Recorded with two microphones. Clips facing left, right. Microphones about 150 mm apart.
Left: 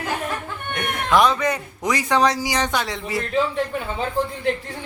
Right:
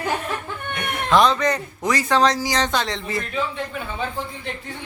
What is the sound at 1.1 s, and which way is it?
A man's voice, 10° left (ahead or behind).